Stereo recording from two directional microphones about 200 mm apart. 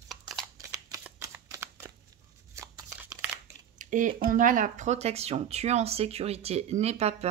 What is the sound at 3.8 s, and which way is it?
Speech, 40° right (ahead or behind).